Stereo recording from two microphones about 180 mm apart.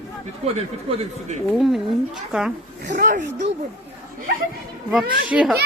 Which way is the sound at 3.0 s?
45° right (ahead or behind).